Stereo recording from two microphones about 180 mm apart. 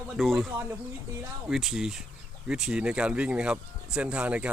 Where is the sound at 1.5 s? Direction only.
Centre (ahead or behind).